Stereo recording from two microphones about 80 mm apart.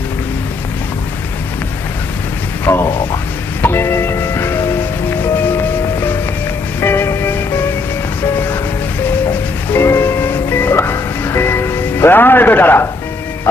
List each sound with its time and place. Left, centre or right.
2.6 s music: left
6.7 s music: left
9.7 s music: left